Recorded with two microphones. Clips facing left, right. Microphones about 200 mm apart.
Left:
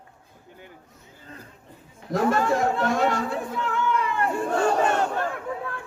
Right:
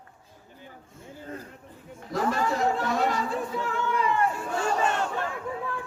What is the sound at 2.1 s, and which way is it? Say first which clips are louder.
Chatter: left 5 dB; 50° left (ahead or behind).